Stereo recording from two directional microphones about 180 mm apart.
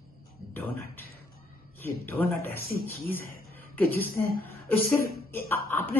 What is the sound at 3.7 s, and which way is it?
A woman's voice, 10° left (ahead or behind).